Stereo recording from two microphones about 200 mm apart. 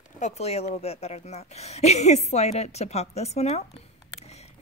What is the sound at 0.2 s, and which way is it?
A woman's voice, 30° left (ahead or behind).